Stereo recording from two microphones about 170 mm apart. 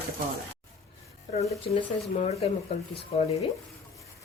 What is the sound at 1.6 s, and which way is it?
Speech, 35° left (ahead or behind).